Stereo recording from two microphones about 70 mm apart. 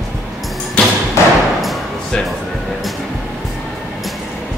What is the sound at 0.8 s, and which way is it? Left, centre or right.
Thump, centre.